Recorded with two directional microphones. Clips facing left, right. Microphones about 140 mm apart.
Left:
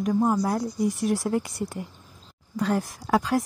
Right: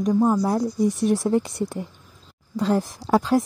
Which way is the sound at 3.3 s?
25° right (ahead or behind).